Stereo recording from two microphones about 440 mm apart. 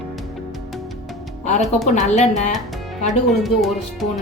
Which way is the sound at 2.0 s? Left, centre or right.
Centre.